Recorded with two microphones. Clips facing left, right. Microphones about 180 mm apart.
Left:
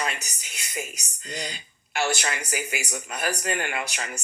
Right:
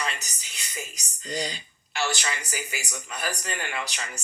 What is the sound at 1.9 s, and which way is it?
Speech, 55° left (ahead or behind).